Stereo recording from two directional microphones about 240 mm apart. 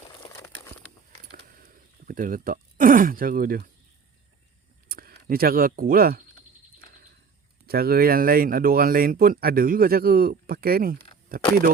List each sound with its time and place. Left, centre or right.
0.1 s crumpling: centre
2.0 s speech: right
4.9 s speech: right
7.7 s speech: right